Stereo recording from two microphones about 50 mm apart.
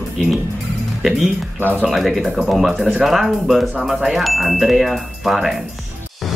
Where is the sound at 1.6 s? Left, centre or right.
Right.